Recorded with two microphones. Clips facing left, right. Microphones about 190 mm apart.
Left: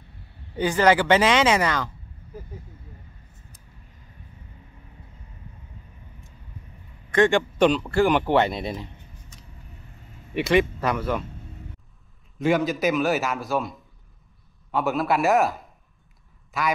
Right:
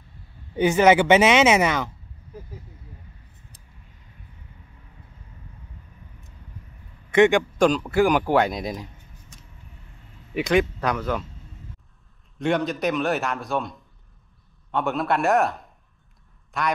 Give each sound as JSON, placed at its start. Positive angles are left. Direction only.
{"t": 0.6, "sound": "speech", "side_deg": -20}
{"t": 7.2, "sound": "a man's voice", "side_deg": -15}
{"t": 8.0, "sound": "a man's voice", "side_deg": -5}
{"t": 10.3, "sound": "a man's voice", "side_deg": 5}
{"t": 12.4, "sound": "a man's voice", "side_deg": 0}